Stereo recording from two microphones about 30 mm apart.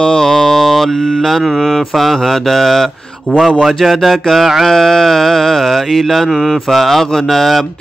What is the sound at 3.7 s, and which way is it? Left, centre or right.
Speech, centre.